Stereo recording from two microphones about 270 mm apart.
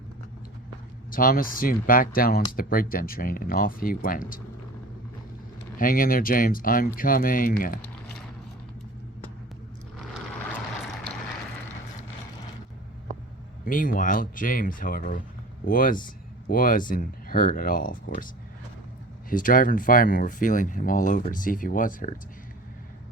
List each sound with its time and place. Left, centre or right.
1.1 s speech: left
5.8 s speech: left
7.8 s a sound: centre
13.7 s speech: left
19.3 s speech: left